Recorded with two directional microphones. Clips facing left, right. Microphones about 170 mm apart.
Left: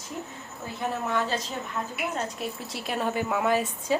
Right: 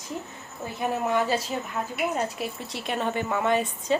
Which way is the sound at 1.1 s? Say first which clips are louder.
Right 5 dB; 10° right (ahead or behind).